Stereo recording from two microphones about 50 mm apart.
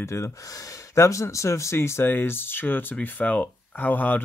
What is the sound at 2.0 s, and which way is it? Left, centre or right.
Speech, left.